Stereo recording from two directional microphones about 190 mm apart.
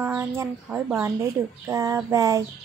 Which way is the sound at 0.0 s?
15° right (ahead or behind).